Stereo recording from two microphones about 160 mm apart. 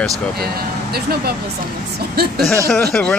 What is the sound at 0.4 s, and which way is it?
Speech, 75° right (ahead or behind).